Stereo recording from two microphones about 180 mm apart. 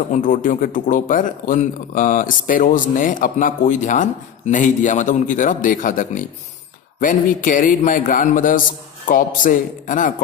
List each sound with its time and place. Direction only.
0.1 s speech: 45° left (ahead or behind)